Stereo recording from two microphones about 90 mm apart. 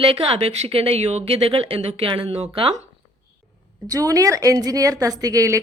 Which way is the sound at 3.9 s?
40° right (ahead or behind).